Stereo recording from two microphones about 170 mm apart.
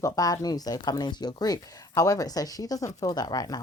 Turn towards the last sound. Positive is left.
turn(degrees=25)  # may be behind; listen again after turning